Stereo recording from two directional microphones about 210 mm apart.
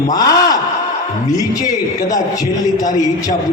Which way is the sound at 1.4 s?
15° left (ahead or behind).